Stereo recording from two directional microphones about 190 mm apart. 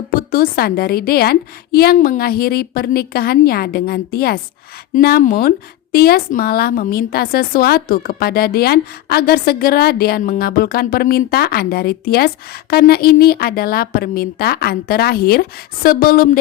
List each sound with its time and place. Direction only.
0.1 s a woman's voice: 50° left (ahead or behind)